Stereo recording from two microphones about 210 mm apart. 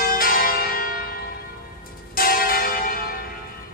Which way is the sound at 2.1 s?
45° left (ahead or behind).